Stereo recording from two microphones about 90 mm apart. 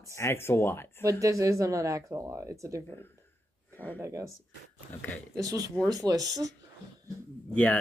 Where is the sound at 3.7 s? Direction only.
20° left (ahead or behind).